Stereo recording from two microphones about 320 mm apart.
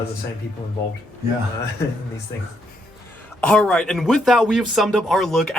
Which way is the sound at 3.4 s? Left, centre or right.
Centre.